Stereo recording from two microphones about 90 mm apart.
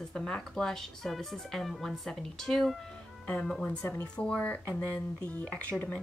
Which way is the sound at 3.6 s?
20° left (ahead or behind).